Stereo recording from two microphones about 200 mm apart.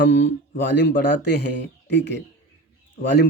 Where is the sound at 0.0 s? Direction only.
60° left (ahead or behind).